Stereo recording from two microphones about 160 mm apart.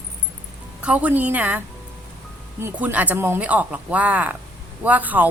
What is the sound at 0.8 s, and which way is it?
Speech, 10° right (ahead or behind).